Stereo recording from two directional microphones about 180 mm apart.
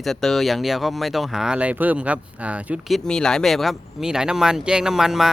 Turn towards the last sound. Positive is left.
turn(degrees=-5)  # may be behind; listen again after turning